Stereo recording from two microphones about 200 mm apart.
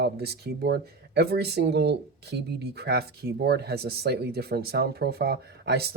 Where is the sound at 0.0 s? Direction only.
55° right (ahead or behind).